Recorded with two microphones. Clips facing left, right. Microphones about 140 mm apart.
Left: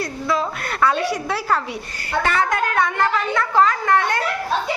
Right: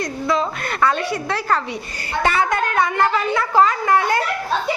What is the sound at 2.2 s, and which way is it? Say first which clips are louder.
A woman's voice: right 2 dB; 10° right (ahead or behind).